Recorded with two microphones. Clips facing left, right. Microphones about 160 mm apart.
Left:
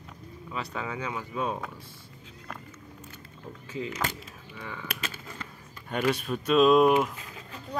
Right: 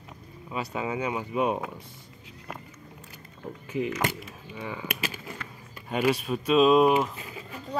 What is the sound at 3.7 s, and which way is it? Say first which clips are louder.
Speech: right 5 dB; 15° right (ahead or behind).